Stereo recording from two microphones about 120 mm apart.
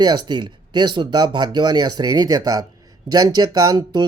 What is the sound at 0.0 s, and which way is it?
Speech, 40° right (ahead or behind).